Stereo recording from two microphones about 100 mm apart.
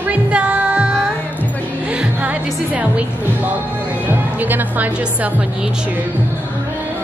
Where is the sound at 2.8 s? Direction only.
15° right (ahead or behind).